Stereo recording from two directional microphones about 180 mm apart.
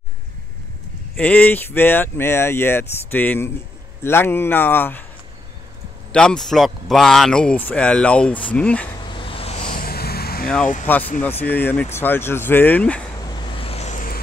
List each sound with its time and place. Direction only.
1.1 s speech: 10° left (ahead or behind)
6.1 s speech: 5° left (ahead or behind)
9.1 s vehicle: 30° left (ahead or behind)
9.7 s vehicle: 55° left (ahead or behind)
10.9 s speech: 10° left (ahead or behind)
13.2 s vehicle: 25° left (ahead or behind); by 14.2 s 50° left (ahead or behind)